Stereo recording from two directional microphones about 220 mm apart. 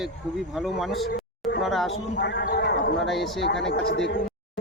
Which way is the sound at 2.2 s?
50° left (ahead or behind).